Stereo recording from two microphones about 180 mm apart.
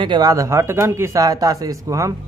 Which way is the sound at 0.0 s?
25° right (ahead or behind).